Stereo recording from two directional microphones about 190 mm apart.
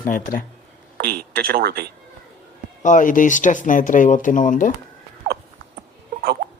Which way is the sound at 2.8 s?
45° left (ahead or behind).